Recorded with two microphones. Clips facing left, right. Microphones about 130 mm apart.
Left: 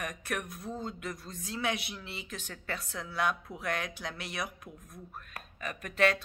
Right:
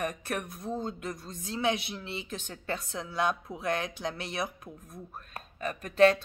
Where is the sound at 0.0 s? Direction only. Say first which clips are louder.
Right 4 dB; 30° right (ahead or behind).